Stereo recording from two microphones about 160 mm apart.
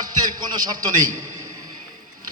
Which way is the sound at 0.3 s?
25° right (ahead or behind).